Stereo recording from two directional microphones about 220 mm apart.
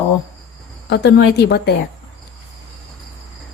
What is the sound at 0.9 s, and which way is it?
Speech, 50° left (ahead or behind).